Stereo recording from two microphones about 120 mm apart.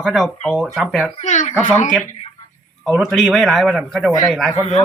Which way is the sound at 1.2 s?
80° left.